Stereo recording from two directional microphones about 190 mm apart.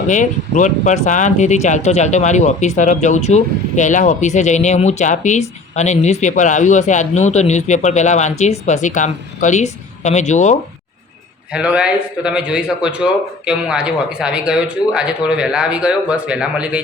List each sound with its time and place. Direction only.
0.1 s speech: 40° left (ahead or behind)
11.5 s speech: 5° right (ahead or behind)